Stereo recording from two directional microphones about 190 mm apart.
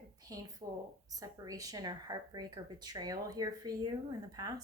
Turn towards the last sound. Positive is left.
turn(degrees=-20)  # may be behind; listen again after turning